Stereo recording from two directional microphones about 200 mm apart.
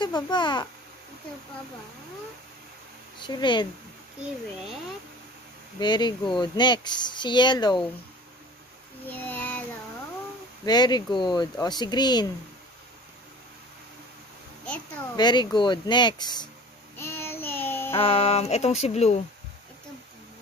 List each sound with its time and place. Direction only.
0.0 s speech: 20° left (ahead or behind)
3.2 s speech: 20° left (ahead or behind)
5.8 s speech: 20° left (ahead or behind)
9.0 s child singing: 10° left (ahead or behind)
10.6 s speech: 20° left (ahead or behind)
15.1 s speech: 20° left (ahead or behind)
17.0 s child singing: 10° left (ahead or behind)
17.9 s speech: 30° left (ahead or behind)